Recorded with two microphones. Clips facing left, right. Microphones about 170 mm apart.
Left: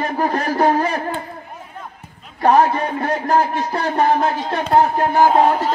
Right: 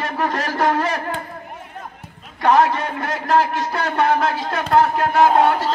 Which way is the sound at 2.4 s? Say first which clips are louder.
Left 2 dB; 35° left (ahead or behind).